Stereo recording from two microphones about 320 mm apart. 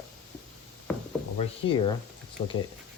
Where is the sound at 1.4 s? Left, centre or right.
Centre.